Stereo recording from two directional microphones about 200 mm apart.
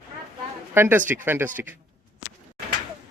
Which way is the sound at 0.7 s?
10° right (ahead or behind).